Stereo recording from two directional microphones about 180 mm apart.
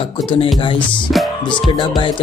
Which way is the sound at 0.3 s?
30° left (ahead or behind).